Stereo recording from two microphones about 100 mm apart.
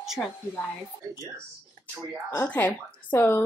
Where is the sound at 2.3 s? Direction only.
20° left (ahead or behind).